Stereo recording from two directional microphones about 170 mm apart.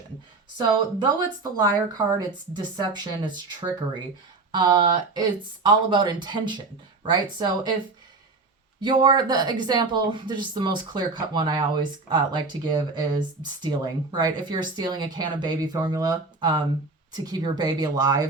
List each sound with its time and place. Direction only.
0.5 s speech: 25° right (ahead or behind)
8.8 s speech: 25° right (ahead or behind)